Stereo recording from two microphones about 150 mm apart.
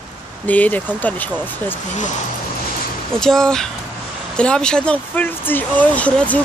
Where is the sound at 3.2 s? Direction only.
5° left (ahead or behind).